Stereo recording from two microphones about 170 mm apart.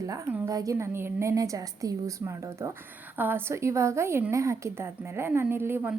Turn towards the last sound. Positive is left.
turn(degrees=-15)  # may be behind; listen again after turning